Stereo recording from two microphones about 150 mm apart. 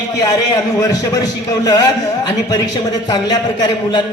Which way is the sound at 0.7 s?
25° left (ahead or behind).